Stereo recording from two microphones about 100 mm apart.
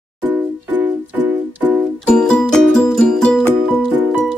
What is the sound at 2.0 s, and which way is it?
Music, 10° left (ahead or behind).